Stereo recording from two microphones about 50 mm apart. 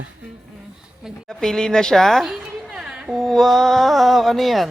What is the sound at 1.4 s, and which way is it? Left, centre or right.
A woman's voice, centre.